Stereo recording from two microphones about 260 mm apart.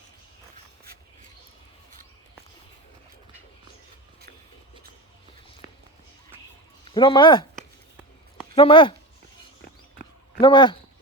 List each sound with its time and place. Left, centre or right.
6.9 s speech: centre
8.5 s speech: centre
10.4 s speech: centre